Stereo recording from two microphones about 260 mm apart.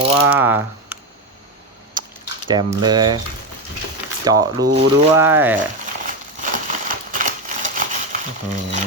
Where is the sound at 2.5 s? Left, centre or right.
Centre.